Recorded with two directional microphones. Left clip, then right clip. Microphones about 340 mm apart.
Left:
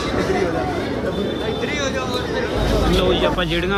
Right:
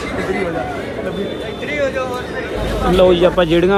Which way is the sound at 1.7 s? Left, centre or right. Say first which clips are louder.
Right 4 dB; centre.